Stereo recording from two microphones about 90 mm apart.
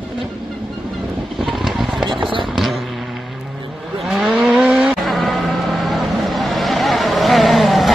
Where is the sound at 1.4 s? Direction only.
5° right (ahead or behind).